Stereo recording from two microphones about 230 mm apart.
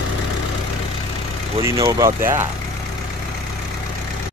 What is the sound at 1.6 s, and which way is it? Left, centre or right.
Speech, centre.